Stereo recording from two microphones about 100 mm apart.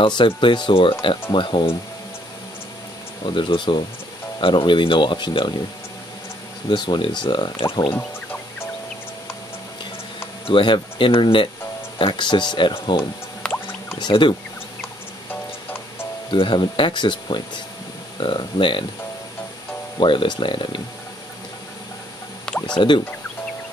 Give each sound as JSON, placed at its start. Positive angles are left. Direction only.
{"t": 0.0, "sound": "speech", "side_deg": 55}
{"t": 3.3, "sound": "speech", "side_deg": 55}
{"t": 6.7, "sound": "speech", "side_deg": 50}
{"t": 7.9, "sound": "music", "side_deg": 20}
{"t": 10.4, "sound": "speech", "side_deg": 55}
{"t": 13.4, "sound": "drip", "side_deg": 10}
{"t": 13.9, "sound": "speech", "side_deg": 50}
{"t": 16.3, "sound": "speech", "side_deg": 55}
{"t": 20.0, "sound": "speech", "side_deg": 55}
{"t": 22.8, "sound": "speech", "side_deg": 50}